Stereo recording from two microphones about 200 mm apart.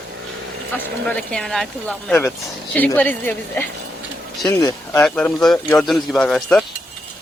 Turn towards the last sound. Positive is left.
turn(degrees=5)  # may be behind; listen again after turning